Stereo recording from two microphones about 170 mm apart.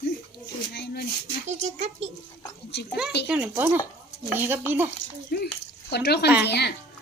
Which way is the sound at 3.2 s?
5° right (ahead or behind).